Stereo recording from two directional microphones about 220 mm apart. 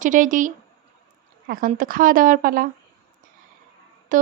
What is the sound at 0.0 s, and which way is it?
Speech, 35° right (ahead or behind).